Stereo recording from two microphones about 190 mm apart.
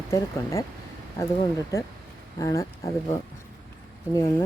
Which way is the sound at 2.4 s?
15° left (ahead or behind).